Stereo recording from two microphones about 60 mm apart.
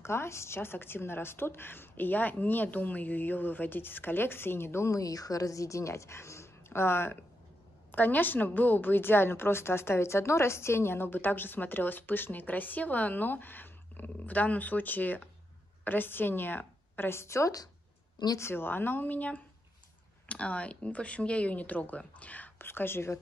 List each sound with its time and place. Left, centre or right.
0.0 s a woman's voice: left
4.9 s a woman's voice: left
22.6 s a woman's voice: left